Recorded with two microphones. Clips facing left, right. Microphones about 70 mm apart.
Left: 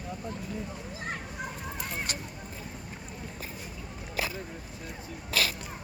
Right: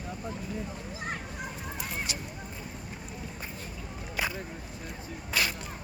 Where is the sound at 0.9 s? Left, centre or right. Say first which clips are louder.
Even; centre.